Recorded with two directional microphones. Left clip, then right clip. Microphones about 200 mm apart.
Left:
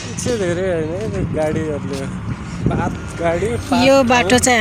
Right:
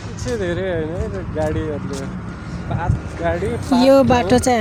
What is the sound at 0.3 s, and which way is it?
Speech, 40° left (ahead or behind).